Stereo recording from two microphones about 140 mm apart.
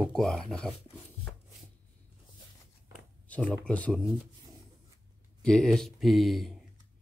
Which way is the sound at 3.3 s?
10° left (ahead or behind).